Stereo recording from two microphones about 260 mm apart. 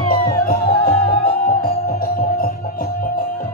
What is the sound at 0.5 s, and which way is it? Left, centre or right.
Music, left.